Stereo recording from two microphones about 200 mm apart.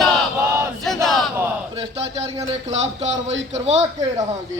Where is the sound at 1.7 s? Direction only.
30° right (ahead or behind).